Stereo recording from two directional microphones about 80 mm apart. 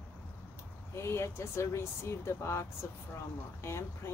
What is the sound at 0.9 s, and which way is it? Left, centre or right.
Speech, left.